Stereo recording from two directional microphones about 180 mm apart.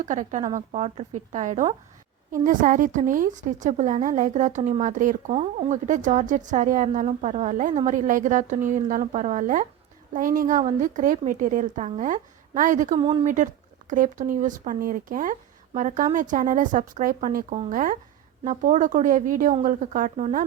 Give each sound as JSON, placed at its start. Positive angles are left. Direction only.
{"t": 0.0, "sound": "a woman's voice", "side_deg": -40}
{"t": 5.3, "sound": "a woman's voice", "side_deg": -35}
{"t": 12.9, "sound": "speech", "side_deg": -25}
{"t": 13.2, "sound": "a woman's voice", "side_deg": -45}